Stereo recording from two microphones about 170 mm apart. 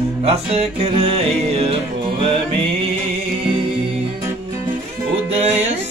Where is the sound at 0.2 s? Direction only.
35° right (ahead or behind).